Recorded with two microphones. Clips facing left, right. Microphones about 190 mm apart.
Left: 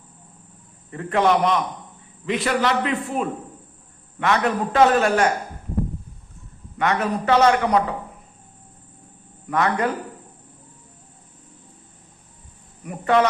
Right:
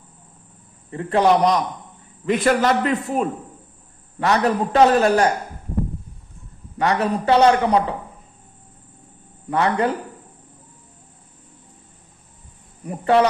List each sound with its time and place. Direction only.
0.9 s a man's voice: 30° right (ahead or behind)
2.2 s a man's voice: 45° right (ahead or behind)
6.7 s a man's voice: 35° right (ahead or behind)
9.5 s speech: 30° right (ahead or behind)
12.8 s a man's voice: 30° right (ahead or behind)